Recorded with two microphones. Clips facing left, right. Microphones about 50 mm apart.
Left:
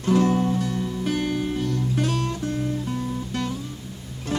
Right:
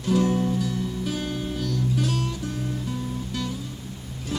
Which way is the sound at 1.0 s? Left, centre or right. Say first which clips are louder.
Left 4 dB; left.